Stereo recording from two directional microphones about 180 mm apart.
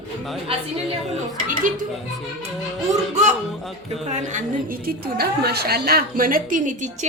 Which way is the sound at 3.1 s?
40° right (ahead or behind).